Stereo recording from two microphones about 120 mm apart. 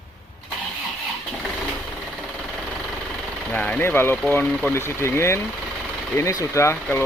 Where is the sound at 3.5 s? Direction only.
10° left (ahead or behind).